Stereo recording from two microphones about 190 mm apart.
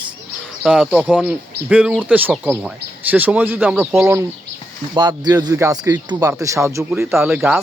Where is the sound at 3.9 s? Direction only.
15° right (ahead or behind).